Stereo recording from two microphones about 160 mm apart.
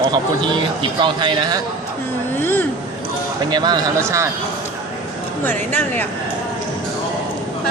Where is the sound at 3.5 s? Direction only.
25° right (ahead or behind).